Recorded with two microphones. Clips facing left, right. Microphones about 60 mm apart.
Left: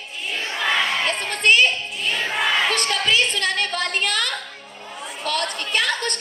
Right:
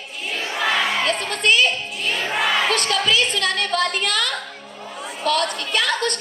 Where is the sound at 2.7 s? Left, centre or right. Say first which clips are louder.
Right 1 dB; left.